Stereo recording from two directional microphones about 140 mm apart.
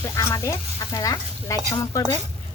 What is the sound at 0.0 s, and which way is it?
Speech, 20° left (ahead or behind).